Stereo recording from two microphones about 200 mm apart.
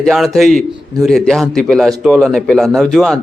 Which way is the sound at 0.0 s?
Centre (ahead or behind).